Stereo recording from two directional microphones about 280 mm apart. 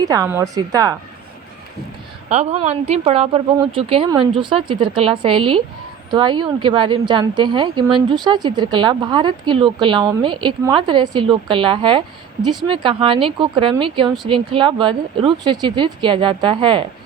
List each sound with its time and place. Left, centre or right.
0.0 s a woman's voice: centre
2.3 s a woman's voice: right